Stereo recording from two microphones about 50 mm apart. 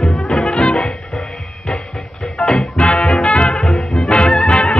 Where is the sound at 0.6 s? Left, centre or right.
Centre.